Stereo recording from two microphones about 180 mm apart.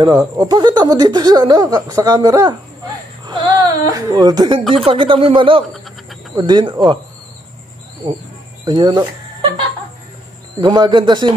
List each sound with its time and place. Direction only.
0.4 s a woman's voice: 20° right (ahead or behind)
5.7 s a sound: centre (ahead or behind)
6.3 s a woman's voice: 25° right (ahead or behind)
8.6 s speech: 25° right (ahead or behind)
10.6 s a woman's voice: 25° right (ahead or behind)